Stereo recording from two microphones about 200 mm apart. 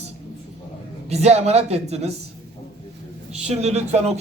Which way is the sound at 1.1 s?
35° right (ahead or behind).